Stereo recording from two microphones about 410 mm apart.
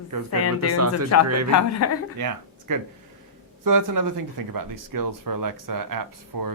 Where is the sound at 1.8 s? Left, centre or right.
Left.